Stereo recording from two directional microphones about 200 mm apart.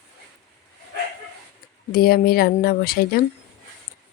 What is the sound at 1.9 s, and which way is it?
Speech, 50° left (ahead or behind).